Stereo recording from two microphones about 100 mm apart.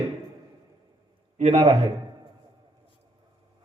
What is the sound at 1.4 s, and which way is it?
Speech, 90° right.